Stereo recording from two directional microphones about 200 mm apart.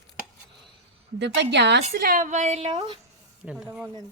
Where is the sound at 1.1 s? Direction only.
60° right (ahead or behind).